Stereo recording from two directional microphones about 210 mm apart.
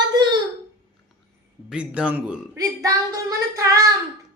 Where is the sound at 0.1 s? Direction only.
20° right (ahead or behind).